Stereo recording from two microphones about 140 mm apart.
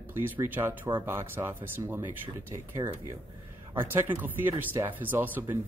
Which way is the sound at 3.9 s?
15° right (ahead or behind).